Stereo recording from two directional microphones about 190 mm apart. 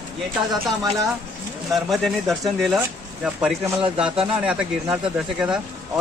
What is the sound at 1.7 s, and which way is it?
Speech, centre (ahead or behind).